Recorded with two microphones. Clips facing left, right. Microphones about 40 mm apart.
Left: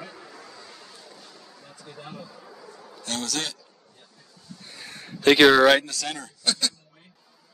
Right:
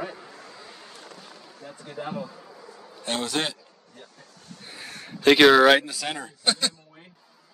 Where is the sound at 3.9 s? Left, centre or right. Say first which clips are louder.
Right 6 dB; right.